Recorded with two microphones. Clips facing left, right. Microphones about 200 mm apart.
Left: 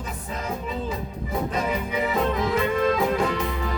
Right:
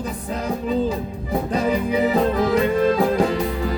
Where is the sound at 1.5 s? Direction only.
35° right (ahead or behind).